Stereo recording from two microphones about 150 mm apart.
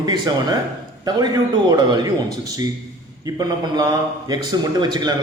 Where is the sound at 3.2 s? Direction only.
25° right (ahead or behind).